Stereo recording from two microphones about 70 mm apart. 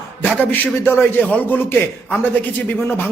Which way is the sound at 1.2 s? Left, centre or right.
Centre.